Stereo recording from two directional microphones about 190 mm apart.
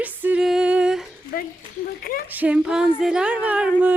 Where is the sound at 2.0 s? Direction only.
50° left (ahead or behind).